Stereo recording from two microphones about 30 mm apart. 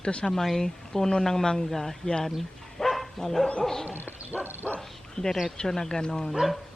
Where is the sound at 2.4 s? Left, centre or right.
Centre.